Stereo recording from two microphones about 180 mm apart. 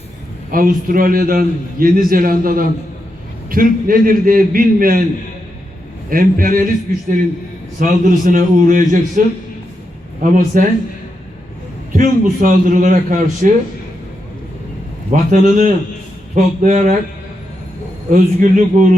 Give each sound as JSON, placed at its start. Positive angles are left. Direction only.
{"t": 0.5, "sound": "a man's voice", "side_deg": -50}
{"t": 6.1, "sound": "a man's voice", "side_deg": -50}
{"t": 7.8, "sound": "a man's voice", "side_deg": -45}
{"t": 11.9, "sound": "a man's voice", "side_deg": -50}
{"t": 15.1, "sound": "a man's voice", "side_deg": -50}
{"t": 18.1, "sound": "a man's voice", "side_deg": -45}